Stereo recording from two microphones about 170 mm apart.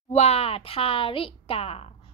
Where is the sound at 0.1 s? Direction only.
40° left (ahead or behind).